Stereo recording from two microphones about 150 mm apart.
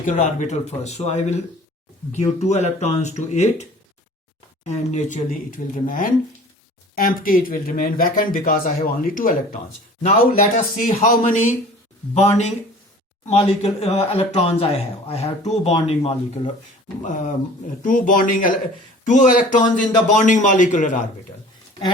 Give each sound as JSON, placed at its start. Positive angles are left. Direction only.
{"t": 0.0, "sound": "speech", "side_deg": 60}
{"t": 10.8, "sound": "speech", "side_deg": 60}
{"t": 12.1, "sound": "speech", "side_deg": 50}
{"t": 17.0, "sound": "speech", "side_deg": 55}